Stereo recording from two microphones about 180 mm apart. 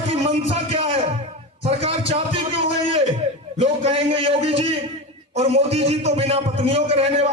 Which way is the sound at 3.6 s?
30° right (ahead or behind).